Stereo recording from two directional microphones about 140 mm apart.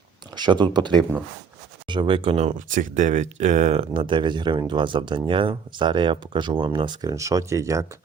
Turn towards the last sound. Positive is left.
turn(degrees=-20)  # may be behind; listen again after turning